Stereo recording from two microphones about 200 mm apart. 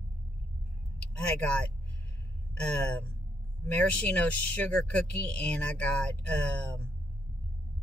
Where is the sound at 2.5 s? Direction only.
5° left (ahead or behind).